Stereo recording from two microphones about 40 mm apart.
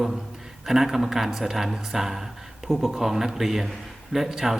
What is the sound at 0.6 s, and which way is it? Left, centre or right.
A man's voice, centre.